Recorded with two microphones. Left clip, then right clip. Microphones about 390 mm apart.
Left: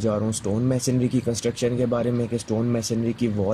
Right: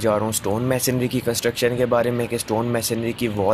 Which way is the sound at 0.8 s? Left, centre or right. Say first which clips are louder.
Right 2 dB; centre.